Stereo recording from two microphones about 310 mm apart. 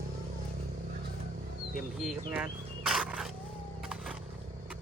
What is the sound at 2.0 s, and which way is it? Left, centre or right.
Speech, centre.